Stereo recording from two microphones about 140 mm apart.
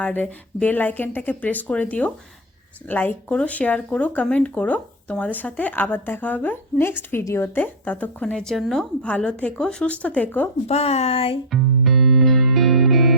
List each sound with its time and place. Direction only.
0.0 s speech: 10° left (ahead or behind)
10.7 s speech: 50° left (ahead or behind)
11.5 s music: centre (ahead or behind)